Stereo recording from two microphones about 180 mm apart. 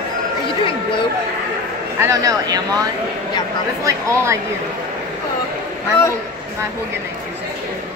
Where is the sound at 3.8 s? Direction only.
15° right (ahead or behind).